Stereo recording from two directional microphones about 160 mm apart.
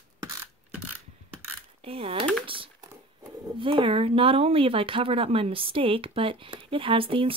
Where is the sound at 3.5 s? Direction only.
35° right (ahead or behind).